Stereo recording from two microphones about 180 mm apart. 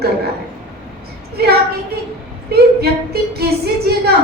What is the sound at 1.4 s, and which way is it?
A woman's voice, 60° right (ahead or behind).